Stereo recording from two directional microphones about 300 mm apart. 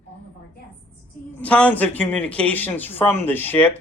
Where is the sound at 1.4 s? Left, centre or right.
Centre.